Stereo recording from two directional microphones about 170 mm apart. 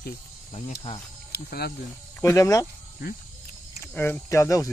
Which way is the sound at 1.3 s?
70° left (ahead or behind).